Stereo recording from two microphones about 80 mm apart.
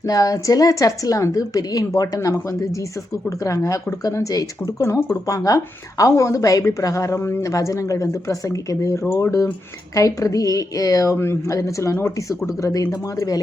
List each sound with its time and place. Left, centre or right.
0.0 s a woman's voice: left
4.9 s speech: left
5.2 s a woman's voice: left
9.0 s speech: left
9.9 s a woman's voice: left